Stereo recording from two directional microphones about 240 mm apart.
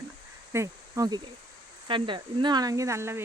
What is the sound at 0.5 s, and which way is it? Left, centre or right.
Speech, centre.